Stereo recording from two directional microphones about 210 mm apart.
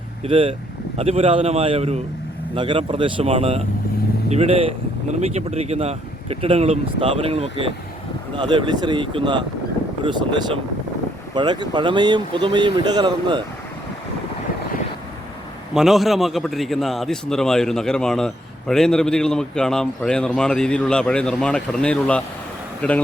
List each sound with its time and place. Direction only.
0.3 s speech: 25° right (ahead or behind)
15.7 s a man's voice: centre (ahead or behind)